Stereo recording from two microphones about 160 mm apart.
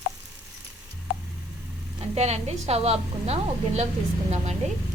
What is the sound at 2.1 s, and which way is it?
Speech, 45° right (ahead or behind).